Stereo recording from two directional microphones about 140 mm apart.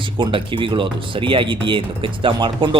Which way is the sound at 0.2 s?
35° right (ahead or behind).